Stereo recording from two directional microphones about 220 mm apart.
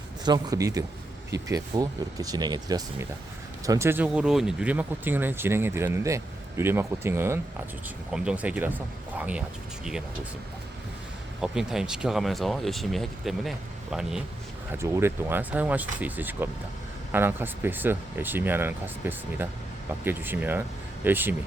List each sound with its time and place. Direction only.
0.3 s speech: 20° right (ahead or behind)
11.3 s speech: centre (ahead or behind)